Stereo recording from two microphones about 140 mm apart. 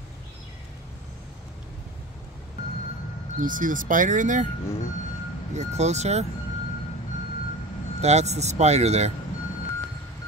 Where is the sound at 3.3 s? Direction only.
75° right (ahead or behind).